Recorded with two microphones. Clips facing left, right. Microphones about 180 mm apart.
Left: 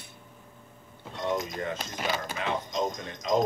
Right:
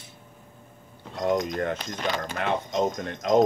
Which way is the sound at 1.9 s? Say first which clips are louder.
Right 3 dB; 10° left (ahead or behind).